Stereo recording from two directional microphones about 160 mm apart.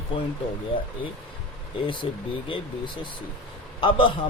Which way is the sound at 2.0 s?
35° left (ahead or behind).